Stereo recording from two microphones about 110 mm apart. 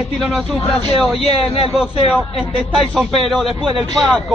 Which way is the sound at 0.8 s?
65° left (ahead or behind).